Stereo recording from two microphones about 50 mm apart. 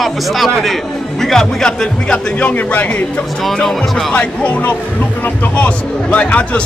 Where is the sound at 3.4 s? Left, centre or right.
Centre.